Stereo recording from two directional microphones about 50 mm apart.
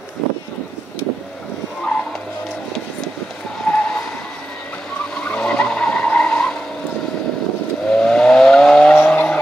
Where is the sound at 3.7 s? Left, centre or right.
Left.